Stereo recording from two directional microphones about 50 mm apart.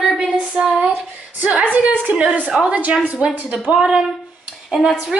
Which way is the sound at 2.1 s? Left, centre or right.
Right.